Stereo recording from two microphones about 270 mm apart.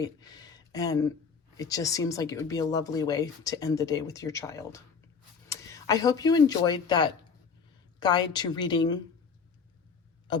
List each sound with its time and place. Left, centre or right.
0.0 s speech: centre